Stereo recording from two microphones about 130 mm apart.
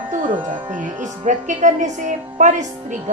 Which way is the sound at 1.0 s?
70° right (ahead or behind).